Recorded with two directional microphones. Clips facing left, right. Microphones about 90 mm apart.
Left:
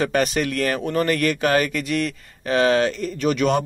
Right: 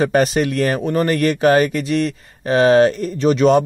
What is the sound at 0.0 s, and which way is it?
A man's voice, 35° right (ahead or behind).